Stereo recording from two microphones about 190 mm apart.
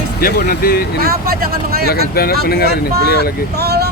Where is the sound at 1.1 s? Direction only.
50° right (ahead or behind).